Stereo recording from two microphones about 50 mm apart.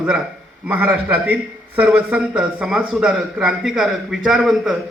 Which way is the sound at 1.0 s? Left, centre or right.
Right.